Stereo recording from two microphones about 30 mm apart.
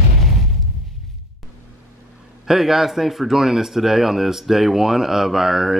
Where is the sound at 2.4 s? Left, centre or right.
Centre.